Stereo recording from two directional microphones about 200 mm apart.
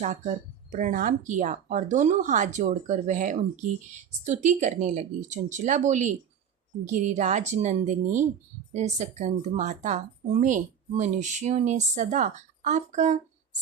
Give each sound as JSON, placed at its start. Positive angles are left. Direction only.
{"t": 0.7, "sound": "speech", "side_deg": -40}